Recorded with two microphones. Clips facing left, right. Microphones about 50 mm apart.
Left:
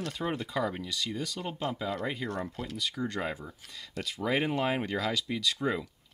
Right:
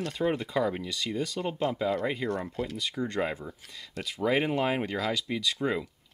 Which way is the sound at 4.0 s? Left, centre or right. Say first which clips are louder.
Right 3 dB; centre.